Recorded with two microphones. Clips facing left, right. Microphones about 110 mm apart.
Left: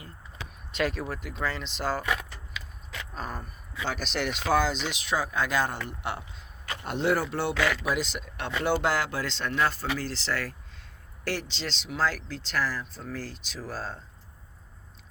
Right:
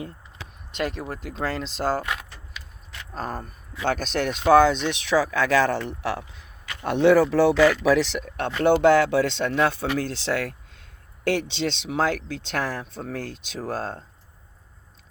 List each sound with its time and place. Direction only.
0.8 s speech: 20° right (ahead or behind)
1.4 s speech: 40° right (ahead or behind)
3.2 s speech: 40° right (ahead or behind); by 6.2 s 90° right
6.8 s speech: 75° right (ahead or behind)
7.9 s speech: 75° right (ahead or behind)
8.2 s speech: 55° right (ahead or behind)